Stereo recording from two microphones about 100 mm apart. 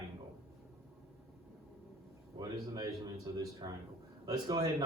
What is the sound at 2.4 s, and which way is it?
A man's voice, 40° right (ahead or behind).